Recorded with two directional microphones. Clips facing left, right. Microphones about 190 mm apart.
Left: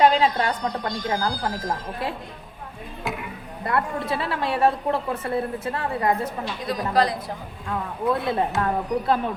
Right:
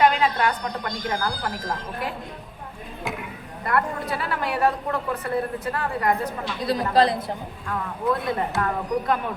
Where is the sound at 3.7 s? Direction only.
25° left (ahead or behind).